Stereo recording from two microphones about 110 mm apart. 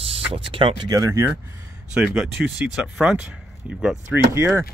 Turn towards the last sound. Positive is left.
turn(degrees=-25)  # may be behind; listen again after turning